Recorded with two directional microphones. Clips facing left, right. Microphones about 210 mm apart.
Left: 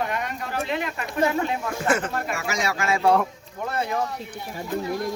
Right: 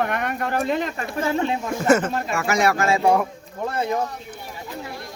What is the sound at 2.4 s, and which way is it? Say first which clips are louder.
Speech: right 7 dB; 60° right (ahead or behind).